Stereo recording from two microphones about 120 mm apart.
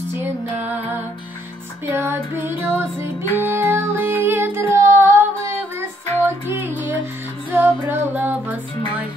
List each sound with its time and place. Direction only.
1.9 s music: 20° right (ahead or behind)
6.2 s music: 20° right (ahead or behind)